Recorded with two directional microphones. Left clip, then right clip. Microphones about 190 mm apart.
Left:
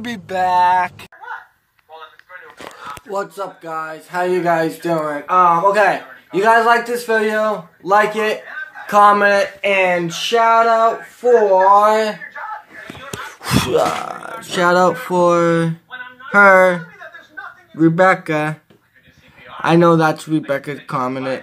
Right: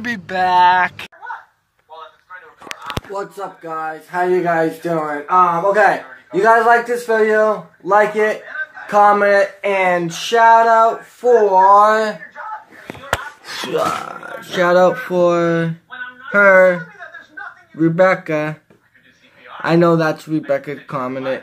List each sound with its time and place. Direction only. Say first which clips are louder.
0.0 s speech: right 1 dB; 10° left (ahead or behind)
3.0 s a sound: right 8 dB; centre (ahead or behind)
3.3 s speech: even; 5° left (ahead or behind)
13.7 s speech: even; 25° left (ahead or behind)
19.6 s speech: left 1 dB; 25° left (ahead or behind)